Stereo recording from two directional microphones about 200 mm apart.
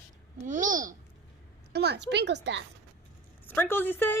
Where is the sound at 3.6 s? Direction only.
10° left (ahead or behind).